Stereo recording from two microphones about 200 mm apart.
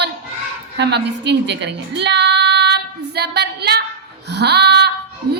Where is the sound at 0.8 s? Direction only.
60° right (ahead or behind).